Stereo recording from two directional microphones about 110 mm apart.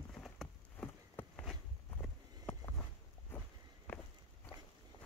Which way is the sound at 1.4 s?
Centre (ahead or behind).